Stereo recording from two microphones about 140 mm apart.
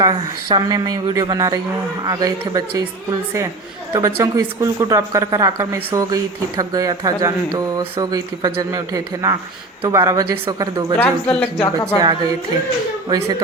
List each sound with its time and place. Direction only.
0.0 s speech: 30° right (ahead or behind)
3.9 s speech: 20° right (ahead or behind)
10.9 s speech: 10° left (ahead or behind)
11.9 s speech: 30° right (ahead or behind)